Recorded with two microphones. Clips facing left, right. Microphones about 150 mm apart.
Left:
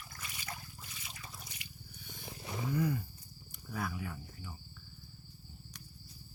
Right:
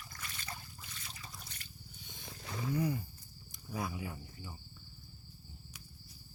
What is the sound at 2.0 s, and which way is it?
Vehicle, 20° right (ahead or behind).